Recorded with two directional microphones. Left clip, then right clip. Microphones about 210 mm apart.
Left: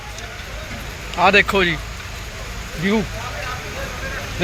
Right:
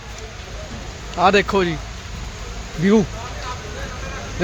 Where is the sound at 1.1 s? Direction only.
20° right (ahead or behind).